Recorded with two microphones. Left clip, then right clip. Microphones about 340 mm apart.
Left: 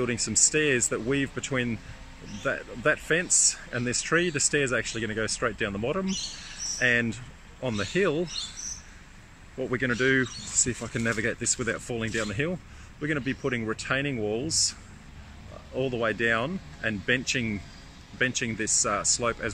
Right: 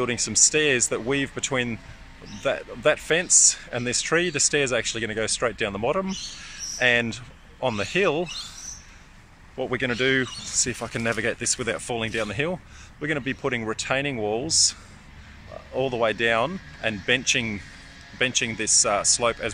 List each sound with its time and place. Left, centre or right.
0.0 s speech: centre
9.7 s speech: centre
14.1 s speech: right
14.5 s speech: centre
15.7 s speech: right
16.0 s speech: centre